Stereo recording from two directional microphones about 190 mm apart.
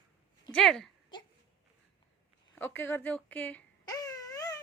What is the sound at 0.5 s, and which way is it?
Speech, centre (ahead or behind).